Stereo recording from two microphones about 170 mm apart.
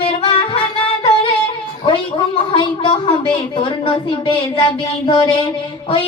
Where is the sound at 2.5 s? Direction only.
30° left (ahead or behind).